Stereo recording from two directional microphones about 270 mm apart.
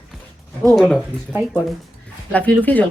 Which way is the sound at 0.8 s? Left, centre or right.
Centre.